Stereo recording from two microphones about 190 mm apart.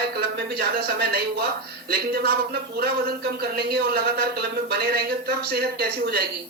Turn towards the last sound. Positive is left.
turn(degrees=-55)  # may be behind; listen again after turning